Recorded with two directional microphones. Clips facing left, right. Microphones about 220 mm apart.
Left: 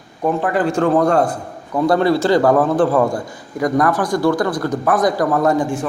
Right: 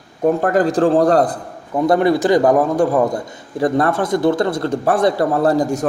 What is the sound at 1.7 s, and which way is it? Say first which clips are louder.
A man's voice: right 1 dB; 20° right (ahead or behind).